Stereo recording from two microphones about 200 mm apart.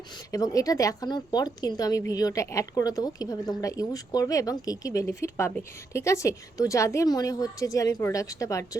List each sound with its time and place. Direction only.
0.3 s a woman's voice: 15° left (ahead or behind)